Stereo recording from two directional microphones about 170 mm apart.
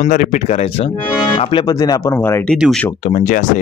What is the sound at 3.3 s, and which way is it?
Speech, 50° left (ahead or behind).